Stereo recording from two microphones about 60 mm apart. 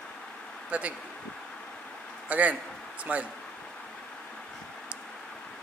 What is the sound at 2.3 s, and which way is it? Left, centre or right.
A man's voice, right.